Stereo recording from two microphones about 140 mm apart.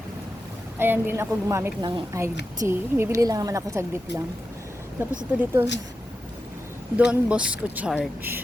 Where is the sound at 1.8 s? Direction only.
35° right (ahead or behind).